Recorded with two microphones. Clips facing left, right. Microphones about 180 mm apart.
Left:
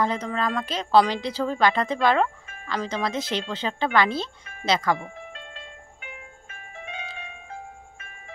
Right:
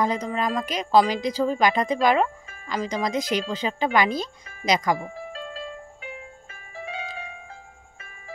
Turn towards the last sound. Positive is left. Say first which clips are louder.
# right 3 dB
turn(degrees=-35)  # may be behind; listen again after turning